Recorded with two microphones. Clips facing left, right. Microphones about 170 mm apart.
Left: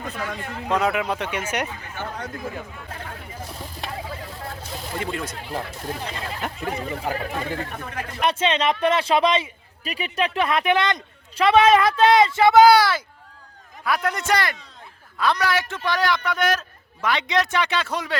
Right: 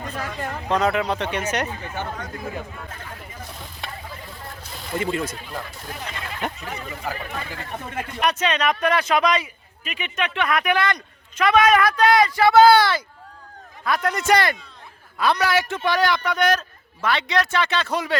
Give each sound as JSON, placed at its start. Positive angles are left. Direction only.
{"t": 0.7, "sound": "a man's voice", "side_deg": 10}
{"t": 4.9, "sound": "speech", "side_deg": 0}
{"t": 5.5, "sound": "speech", "side_deg": 30}
{"t": 14.3, "sound": "speech", "side_deg": -25}
{"t": 15.2, "sound": "a man's voice", "side_deg": -5}
{"t": 17.9, "sound": "speech", "side_deg": 0}